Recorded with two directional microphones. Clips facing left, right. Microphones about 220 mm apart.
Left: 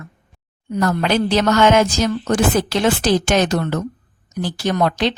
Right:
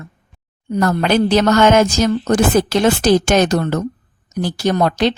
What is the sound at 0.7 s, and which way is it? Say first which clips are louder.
A woman's voice: right 3 dB; 45° right (ahead or behind).